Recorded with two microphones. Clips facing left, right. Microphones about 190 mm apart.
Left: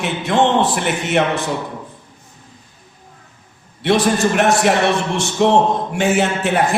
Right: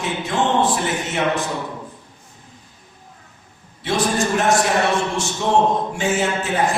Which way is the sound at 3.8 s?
70° left (ahead or behind).